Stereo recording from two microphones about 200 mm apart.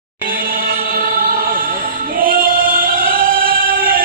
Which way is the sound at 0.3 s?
45° right (ahead or behind).